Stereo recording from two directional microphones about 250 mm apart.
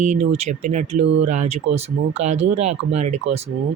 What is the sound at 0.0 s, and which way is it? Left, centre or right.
Speech, right.